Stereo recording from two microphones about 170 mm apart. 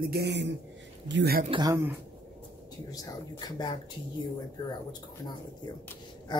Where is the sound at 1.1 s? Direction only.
80° right.